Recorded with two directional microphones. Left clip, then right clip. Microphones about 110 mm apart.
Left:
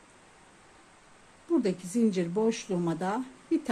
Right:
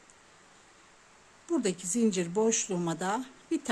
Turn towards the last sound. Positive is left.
turn(degrees=-25)  # may be behind; listen again after turning